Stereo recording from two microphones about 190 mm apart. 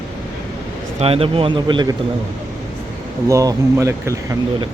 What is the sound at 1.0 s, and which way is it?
Speech, 30° right (ahead or behind).